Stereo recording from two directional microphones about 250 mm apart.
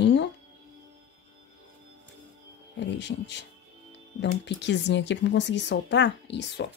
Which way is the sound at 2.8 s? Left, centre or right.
Left.